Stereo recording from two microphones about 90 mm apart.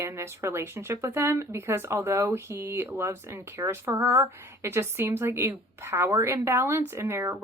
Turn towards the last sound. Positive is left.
turn(degrees=-30)  # may be behind; listen again after turning